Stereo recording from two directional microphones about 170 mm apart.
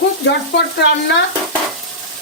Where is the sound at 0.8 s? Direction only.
90° left.